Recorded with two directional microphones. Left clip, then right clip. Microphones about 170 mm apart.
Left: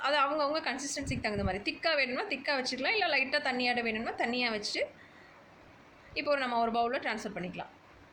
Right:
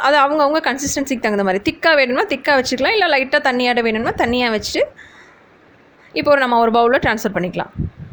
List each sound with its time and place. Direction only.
0.0 s a woman's voice: 65° right (ahead or behind)
6.1 s a woman's voice: 65° right (ahead or behind)